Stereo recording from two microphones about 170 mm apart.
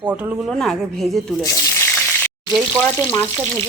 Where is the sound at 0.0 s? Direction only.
10° right (ahead or behind).